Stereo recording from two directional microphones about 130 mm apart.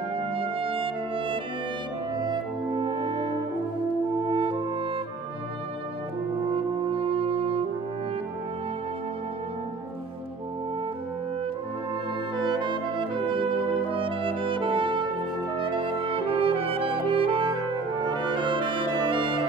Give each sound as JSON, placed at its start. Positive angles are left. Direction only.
{"t": 0.3, "sound": "music", "side_deg": -45}
{"t": 6.5, "sound": "french horn", "side_deg": -50}
{"t": 12.4, "sound": "brass instrument", "side_deg": -35}